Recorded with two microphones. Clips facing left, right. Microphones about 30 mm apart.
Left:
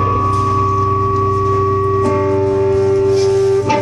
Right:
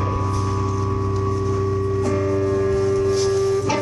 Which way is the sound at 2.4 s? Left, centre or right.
Centre.